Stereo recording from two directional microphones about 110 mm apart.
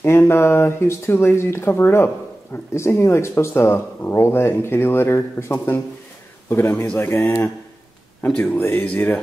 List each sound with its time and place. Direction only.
0.0 s speech: 25° left (ahead or behind)
8.2 s speech: 15° left (ahead or behind)